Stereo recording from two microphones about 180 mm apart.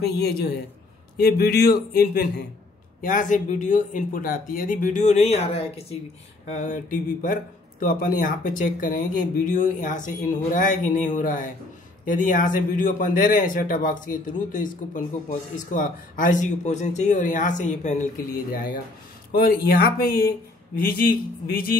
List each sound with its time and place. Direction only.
0.0 s a man's voice: 60° left (ahead or behind)
3.0 s a man's voice: 45° left (ahead or behind)
19.3 s a man's voice: 60° left (ahead or behind)